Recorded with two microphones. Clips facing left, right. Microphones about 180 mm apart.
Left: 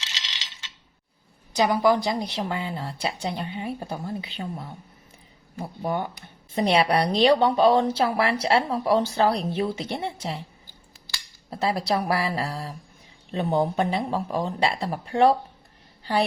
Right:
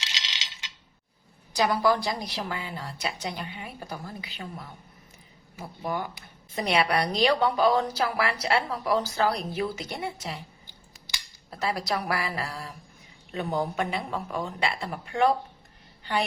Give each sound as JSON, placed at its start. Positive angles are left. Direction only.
{"t": 1.5, "sound": "a woman's voice", "side_deg": 20}
{"t": 5.8, "sound": "a woman's voice", "side_deg": 30}
{"t": 11.5, "sound": "a woman's voice", "side_deg": 30}